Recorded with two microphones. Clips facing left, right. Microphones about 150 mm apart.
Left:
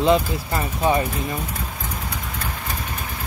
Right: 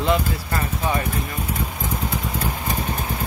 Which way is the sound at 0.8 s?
20° left (ahead or behind).